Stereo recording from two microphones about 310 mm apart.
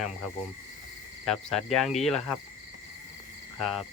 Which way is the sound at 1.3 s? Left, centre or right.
Centre.